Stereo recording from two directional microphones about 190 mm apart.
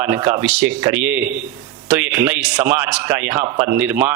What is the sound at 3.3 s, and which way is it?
Speech, 25° right (ahead or behind).